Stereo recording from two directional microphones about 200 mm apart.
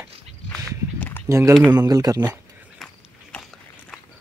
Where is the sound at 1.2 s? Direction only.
15° right (ahead or behind).